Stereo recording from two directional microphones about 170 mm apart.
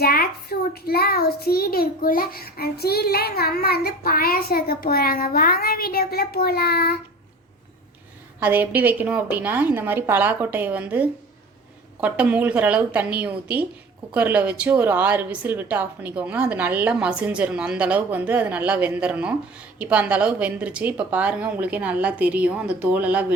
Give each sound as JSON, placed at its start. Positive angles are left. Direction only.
{"t": 0.0, "sound": "a child's voice", "side_deg": 65}
{"t": 8.4, "sound": "a woman's voice", "side_deg": -10}